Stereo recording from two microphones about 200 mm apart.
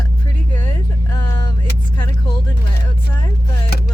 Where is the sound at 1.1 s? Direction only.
20° left (ahead or behind).